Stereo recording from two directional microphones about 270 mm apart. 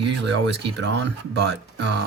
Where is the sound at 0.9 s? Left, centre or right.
Right.